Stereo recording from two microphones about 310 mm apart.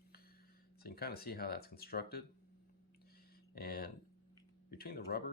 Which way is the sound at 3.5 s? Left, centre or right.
Left.